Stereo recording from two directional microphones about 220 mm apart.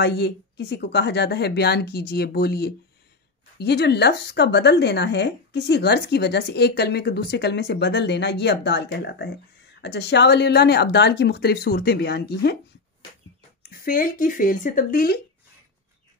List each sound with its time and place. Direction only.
0.0 s speech: 50° left (ahead or behind)
13.6 s speech: 40° left (ahead or behind)